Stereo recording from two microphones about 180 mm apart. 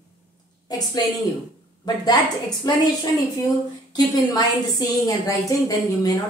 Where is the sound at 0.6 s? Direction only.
20° left (ahead or behind).